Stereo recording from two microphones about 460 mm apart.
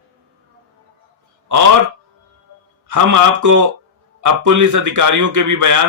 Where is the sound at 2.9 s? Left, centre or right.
Right.